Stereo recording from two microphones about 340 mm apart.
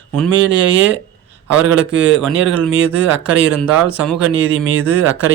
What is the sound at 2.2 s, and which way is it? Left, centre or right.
Speech, centre.